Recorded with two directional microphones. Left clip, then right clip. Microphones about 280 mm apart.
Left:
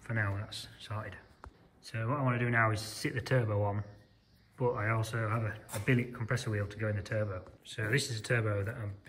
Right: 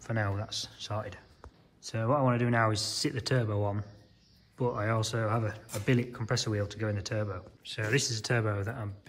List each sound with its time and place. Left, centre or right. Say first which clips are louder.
0.0 s speech: right 2 dB; centre